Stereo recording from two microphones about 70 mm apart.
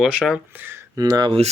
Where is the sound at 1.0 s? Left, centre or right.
Right.